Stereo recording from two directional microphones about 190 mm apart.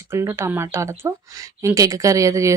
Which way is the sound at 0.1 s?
15° right (ahead or behind).